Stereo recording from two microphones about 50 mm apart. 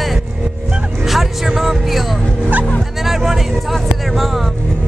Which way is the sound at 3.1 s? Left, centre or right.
Centre.